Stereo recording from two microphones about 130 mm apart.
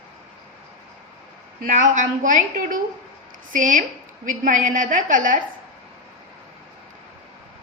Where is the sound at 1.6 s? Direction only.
80° right.